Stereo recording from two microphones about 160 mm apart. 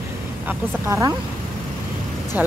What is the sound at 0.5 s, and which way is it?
Speech, 15° right (ahead or behind).